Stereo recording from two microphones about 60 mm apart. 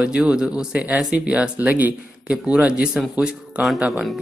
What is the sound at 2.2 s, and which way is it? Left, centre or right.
Speech, centre.